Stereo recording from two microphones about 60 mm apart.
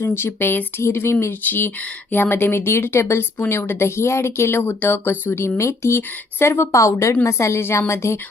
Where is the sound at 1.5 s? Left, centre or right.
Left.